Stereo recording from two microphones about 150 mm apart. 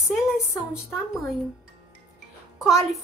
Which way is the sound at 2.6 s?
Centre (ahead or behind).